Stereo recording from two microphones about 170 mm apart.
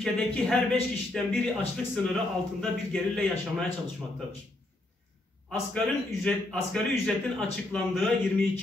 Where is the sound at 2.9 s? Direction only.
5° left (ahead or behind).